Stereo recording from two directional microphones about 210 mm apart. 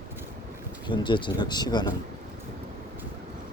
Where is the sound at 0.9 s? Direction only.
20° left (ahead or behind).